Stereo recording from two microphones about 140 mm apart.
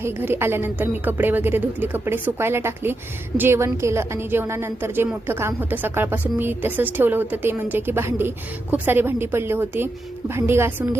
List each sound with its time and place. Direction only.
0.0 s a woman's voice: 15° right (ahead or behind)